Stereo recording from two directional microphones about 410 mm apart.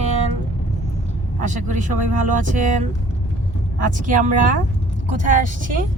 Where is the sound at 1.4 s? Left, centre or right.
Centre.